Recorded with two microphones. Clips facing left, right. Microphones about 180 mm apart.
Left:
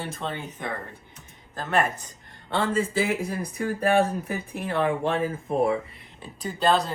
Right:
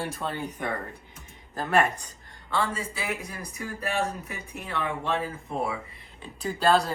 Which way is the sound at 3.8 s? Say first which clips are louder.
Left 7 dB; 55° left (ahead or behind).